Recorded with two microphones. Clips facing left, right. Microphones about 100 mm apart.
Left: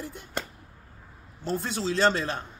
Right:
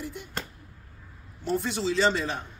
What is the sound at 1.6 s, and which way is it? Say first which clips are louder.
Speech: left 2 dB; 50° left (ahead or behind).